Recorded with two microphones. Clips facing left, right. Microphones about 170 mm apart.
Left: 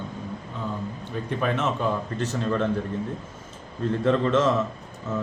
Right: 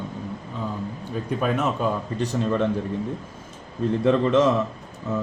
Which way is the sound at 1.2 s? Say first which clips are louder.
Right 2 dB; 10° right (ahead or behind).